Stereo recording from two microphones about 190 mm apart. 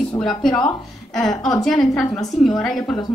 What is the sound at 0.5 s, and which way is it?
Speech, 20° left (ahead or behind).